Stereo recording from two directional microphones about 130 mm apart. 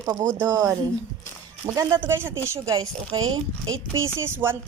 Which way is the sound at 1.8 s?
20° right (ahead or behind).